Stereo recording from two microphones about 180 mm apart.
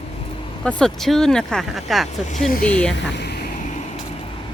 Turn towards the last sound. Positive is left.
turn(degrees=65)  # may be behind; listen again after turning